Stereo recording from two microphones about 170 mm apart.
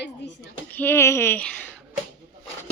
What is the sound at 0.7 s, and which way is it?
Speech, 10° left (ahead or behind).